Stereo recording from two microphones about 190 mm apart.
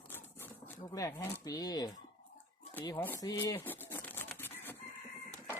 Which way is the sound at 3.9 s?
10° left (ahead or behind).